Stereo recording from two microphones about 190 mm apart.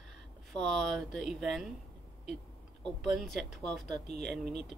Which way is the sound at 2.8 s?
Centre (ahead or behind).